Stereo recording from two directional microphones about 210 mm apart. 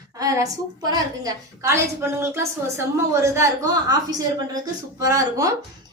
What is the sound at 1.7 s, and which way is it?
A woman's voice, 10° right (ahead or behind).